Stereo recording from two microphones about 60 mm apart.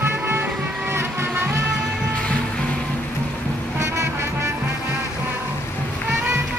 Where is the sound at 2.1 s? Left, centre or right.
Centre.